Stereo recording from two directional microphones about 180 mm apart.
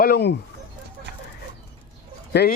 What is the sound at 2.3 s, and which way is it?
Speech, 65° left (ahead or behind).